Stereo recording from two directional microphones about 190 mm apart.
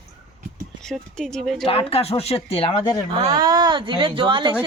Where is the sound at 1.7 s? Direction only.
30° left (ahead or behind).